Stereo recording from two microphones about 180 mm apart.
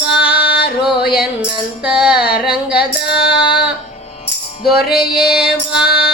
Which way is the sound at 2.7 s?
65° left (ahead or behind).